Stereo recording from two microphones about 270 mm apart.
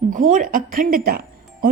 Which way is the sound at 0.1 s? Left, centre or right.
Right.